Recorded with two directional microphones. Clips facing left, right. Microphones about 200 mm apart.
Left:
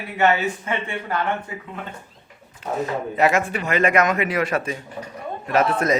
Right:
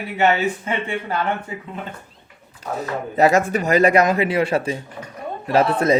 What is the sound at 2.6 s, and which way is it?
Speech, 35° right (ahead or behind).